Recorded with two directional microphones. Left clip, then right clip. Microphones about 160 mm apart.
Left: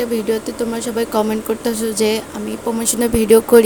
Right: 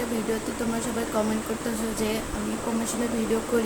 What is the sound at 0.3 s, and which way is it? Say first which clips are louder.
Speech: left 9 dB; 65° left (ahead or behind).